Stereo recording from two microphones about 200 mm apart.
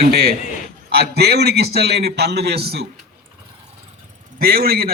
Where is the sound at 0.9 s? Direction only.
55° right (ahead or behind).